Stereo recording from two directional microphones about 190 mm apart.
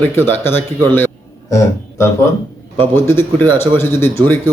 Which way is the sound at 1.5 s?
15° left (ahead or behind).